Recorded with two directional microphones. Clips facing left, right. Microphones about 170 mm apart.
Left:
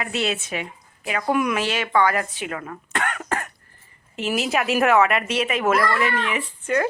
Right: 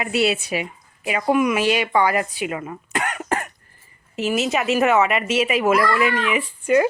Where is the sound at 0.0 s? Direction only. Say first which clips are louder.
Right 5 dB; 10° right (ahead or behind).